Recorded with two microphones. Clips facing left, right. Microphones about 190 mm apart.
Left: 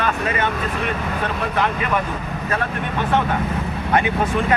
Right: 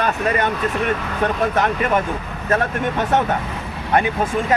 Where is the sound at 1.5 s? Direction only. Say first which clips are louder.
Right 2 dB; 45° right (ahead or behind).